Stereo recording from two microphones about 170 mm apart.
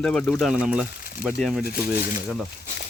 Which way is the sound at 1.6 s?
60° left (ahead or behind).